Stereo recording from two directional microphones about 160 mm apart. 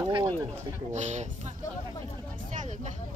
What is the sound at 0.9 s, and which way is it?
Speech, 45° right (ahead or behind).